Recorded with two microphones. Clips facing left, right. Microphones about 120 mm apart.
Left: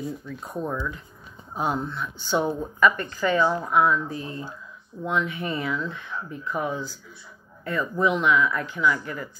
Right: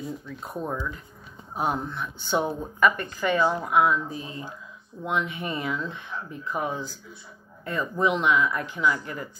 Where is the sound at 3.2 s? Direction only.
20° right (ahead or behind).